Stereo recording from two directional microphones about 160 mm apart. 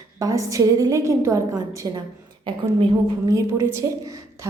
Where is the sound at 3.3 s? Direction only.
15° right (ahead or behind).